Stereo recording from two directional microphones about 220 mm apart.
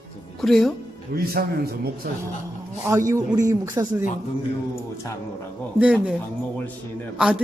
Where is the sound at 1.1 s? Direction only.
45° right (ahead or behind).